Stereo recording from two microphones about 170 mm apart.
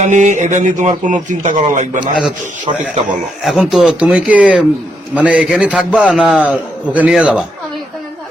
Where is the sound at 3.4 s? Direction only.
Centre (ahead or behind).